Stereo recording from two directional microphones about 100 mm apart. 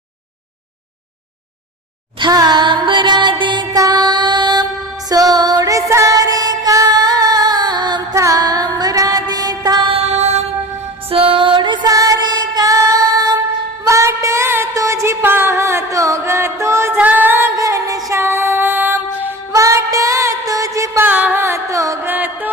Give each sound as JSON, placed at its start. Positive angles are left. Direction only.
{"t": 2.1, "sound": "music", "side_deg": -45}
{"t": 8.1, "sound": "mantra", "side_deg": -35}
{"t": 9.9, "sound": "music", "side_deg": -90}
{"t": 11.1, "sound": "music", "side_deg": -65}
{"t": 11.9, "sound": "music", "side_deg": -35}
{"t": 13.8, "sound": "a sound", "side_deg": -30}
{"t": 14.7, "sound": "music", "side_deg": -30}
{"t": 17.6, "sound": "music", "side_deg": -35}
{"t": 19.5, "sound": "music", "side_deg": -35}
{"t": 21.0, "sound": "carnatic music", "side_deg": -15}
{"t": 22.0, "sound": "music", "side_deg": -20}